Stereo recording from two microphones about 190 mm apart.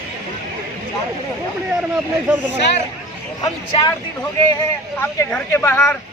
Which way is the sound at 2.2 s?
10° right (ahead or behind).